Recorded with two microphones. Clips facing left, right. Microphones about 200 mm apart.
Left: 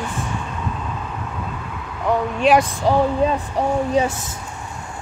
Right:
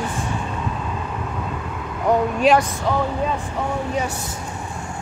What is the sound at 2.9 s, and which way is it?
Speech, 35° left (ahead or behind).